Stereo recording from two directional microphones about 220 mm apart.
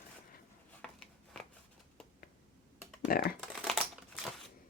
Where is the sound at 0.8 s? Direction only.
5° left (ahead or behind).